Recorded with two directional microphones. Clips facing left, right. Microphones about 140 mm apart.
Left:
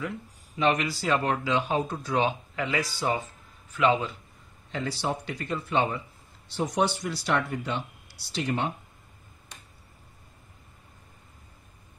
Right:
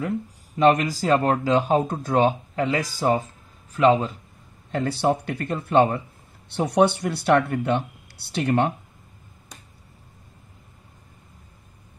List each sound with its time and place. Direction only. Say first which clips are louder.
0.6 s speech: right 7 dB; 45° right (ahead or behind)
4.6 s speech: right 8 dB; 50° right (ahead or behind)
6.5 s speech: right 7 dB; 65° right (ahead or behind)